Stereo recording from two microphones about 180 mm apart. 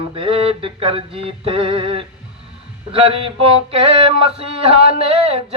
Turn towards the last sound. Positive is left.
turn(degrees=-30)  # may be behind; listen again after turning